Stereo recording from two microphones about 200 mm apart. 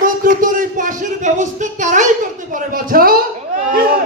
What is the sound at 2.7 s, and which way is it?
Speech, 45° right (ahead or behind).